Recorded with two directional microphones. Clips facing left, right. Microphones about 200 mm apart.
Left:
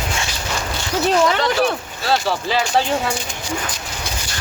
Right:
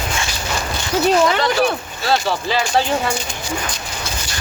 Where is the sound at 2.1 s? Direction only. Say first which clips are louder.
Even; 5° left (ahead or behind).